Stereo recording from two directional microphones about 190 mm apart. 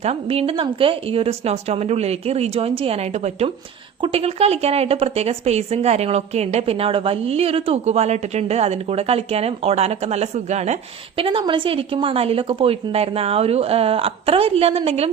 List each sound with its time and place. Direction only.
0.0 s a woman's voice: 30° right (ahead or behind)